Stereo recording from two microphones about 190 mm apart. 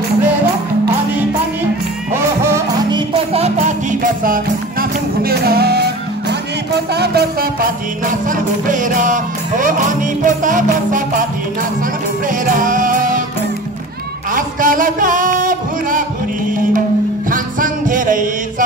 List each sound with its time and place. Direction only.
2.1 s music: 15° right (ahead or behind)
3.3 s music: 35° right (ahead or behind); by 7.2 s 60° right (ahead or behind)
8.3 s music: 45° right (ahead or behind)
12.4 s music: 45° right (ahead or behind)
14.3 s music: 45° right (ahead or behind)
17.3 s music: 45° right (ahead or behind)